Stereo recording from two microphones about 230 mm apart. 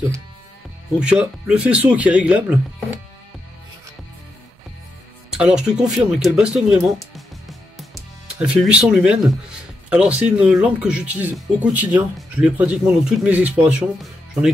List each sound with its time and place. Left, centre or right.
0.9 s speech: centre
5.3 s speech: centre